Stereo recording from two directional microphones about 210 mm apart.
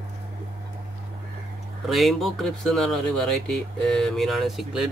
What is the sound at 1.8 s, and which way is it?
Speech, centre (ahead or behind).